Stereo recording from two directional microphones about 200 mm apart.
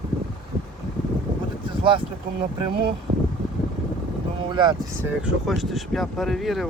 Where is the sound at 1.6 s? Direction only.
25° right (ahead or behind).